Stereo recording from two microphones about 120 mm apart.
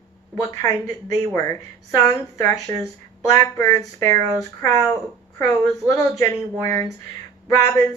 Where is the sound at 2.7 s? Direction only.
90° right.